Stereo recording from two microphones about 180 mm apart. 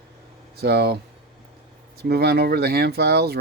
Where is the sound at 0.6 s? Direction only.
65° right (ahead or behind).